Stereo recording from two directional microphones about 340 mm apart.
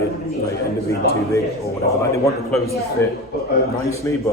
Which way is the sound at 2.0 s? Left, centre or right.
Centre.